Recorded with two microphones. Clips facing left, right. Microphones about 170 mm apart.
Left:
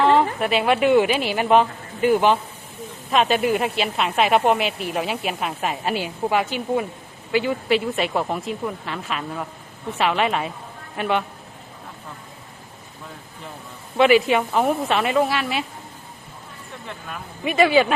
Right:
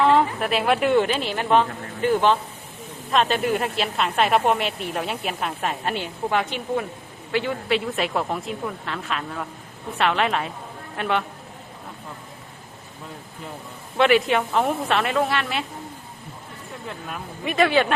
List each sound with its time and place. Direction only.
0.0 s a woman's voice: centre (ahead or behind)
13.9 s a woman's voice: centre (ahead or behind)
17.1 s a woman's voice: centre (ahead or behind)